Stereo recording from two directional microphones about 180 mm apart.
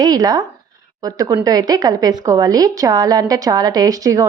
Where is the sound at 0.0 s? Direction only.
20° right (ahead or behind).